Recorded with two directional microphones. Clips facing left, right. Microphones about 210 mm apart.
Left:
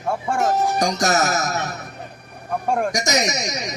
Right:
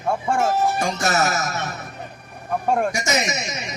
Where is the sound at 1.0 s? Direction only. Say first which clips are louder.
Left 2 dB; 40° left (ahead or behind).